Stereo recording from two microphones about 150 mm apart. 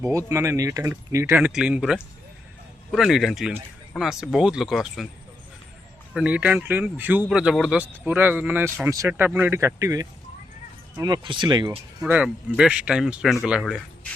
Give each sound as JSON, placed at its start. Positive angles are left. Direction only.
{"t": 0.3, "sound": "speech", "side_deg": -20}
{"t": 6.1, "sound": "speech", "side_deg": -10}
{"t": 12.0, "sound": "speech", "side_deg": -10}